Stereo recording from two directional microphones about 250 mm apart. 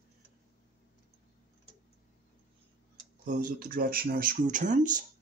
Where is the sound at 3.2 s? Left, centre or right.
Right.